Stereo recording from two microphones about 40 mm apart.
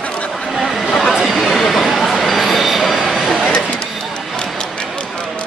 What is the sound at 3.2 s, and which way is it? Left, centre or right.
Printer, centre.